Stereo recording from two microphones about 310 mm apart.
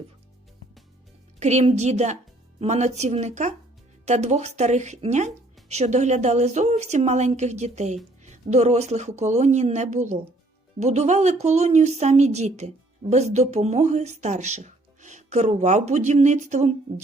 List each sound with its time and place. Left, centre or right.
1.4 s speech: right